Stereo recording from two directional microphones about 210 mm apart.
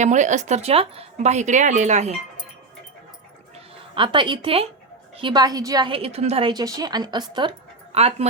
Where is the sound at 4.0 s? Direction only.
25° right (ahead or behind).